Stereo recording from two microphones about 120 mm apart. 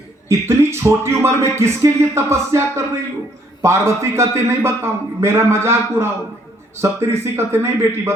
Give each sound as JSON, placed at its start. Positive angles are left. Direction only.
{"t": 0.3, "sound": "speech", "side_deg": -20}